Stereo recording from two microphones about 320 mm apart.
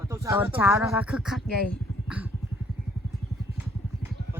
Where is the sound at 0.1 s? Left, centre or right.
Centre.